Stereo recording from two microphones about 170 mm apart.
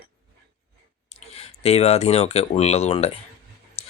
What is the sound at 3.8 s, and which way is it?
Dog, 40° left (ahead or behind).